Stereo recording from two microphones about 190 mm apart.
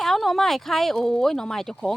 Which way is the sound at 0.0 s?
Centre (ahead or behind).